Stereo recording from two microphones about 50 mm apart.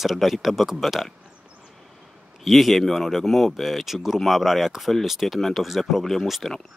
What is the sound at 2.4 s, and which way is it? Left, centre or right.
Speech, centre.